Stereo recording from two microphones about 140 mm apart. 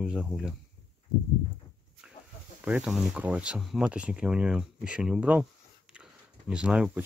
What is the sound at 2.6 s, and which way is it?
Speech, 10° right (ahead or behind).